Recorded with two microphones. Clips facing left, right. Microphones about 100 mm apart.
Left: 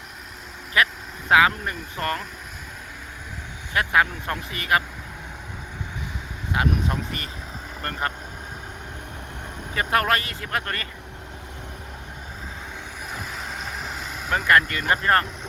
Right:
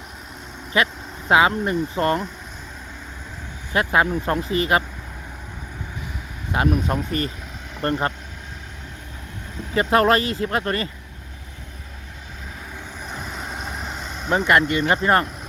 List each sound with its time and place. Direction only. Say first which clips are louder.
0.7 s speech: right 1 dB; 25° right (ahead or behind)
3.7 s speech: right 2 dB; 25° right (ahead or behind)
6.5 s speech: right 3 dB; 35° right (ahead or behind)
9.7 s speech: right 5 dB; 25° right (ahead or behind)
13.1 s vehicle: right 2 dB; 5° left (ahead or behind)
14.3 s speech: right 2 dB; 25° right (ahead or behind)